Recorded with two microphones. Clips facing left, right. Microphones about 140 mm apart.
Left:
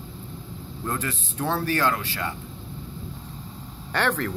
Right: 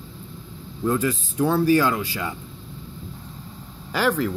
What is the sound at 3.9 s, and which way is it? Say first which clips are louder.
Speech: right 3 dB; 5° right (ahead or behind).